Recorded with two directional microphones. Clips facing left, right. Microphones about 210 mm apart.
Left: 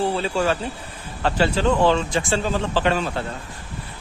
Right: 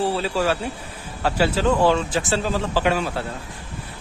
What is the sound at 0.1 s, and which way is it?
Speech, 5° right (ahead or behind).